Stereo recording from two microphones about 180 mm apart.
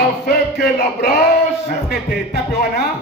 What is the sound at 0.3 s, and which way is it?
Speech, 60° left (ahead or behind).